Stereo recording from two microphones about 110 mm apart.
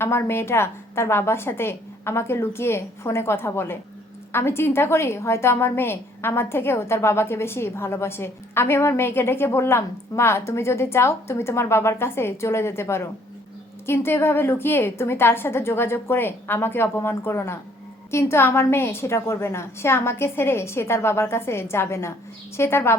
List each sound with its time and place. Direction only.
0.0 s a woman's voice: 25° left (ahead or behind)